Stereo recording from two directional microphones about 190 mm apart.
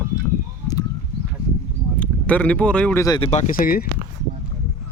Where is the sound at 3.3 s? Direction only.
40° left (ahead or behind).